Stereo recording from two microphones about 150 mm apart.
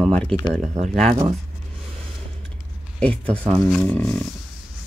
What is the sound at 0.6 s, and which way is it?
Speech, 55° right (ahead or behind).